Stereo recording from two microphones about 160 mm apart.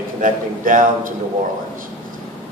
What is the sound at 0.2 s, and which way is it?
Speech, 55° right (ahead or behind).